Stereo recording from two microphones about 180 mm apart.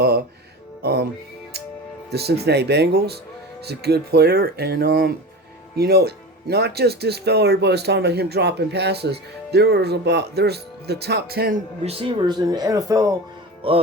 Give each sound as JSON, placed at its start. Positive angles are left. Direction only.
{"t": 0.8, "sound": "music", "side_deg": -65}
{"t": 2.1, "sound": "speech", "side_deg": -65}
{"t": 11.8, "sound": "speech", "side_deg": -30}
{"t": 13.6, "sound": "music", "side_deg": -30}